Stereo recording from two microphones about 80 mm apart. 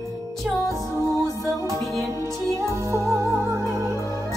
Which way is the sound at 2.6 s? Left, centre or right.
Right.